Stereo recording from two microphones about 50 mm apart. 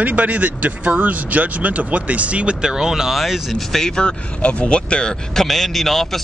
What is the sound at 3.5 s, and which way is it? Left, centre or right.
Speech, centre.